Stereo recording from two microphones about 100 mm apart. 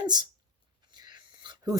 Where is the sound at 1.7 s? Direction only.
40° right (ahead or behind).